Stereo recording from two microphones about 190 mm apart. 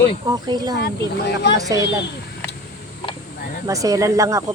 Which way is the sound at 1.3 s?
65° left (ahead or behind).